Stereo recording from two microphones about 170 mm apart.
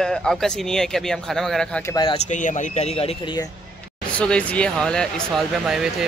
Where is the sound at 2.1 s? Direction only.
45° left (ahead or behind).